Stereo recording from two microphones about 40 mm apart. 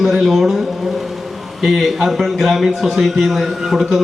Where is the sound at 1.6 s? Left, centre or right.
Centre.